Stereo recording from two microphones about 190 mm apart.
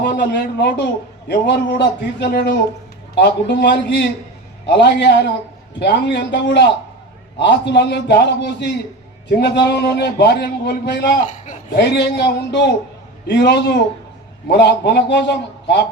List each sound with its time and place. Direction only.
0.0 s a man's voice: 55° left (ahead or behind)